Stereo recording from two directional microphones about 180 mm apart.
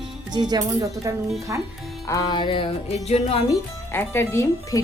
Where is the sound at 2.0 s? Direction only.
20° left (ahead or behind).